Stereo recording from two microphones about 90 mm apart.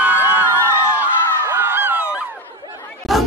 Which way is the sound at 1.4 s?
25° right (ahead or behind).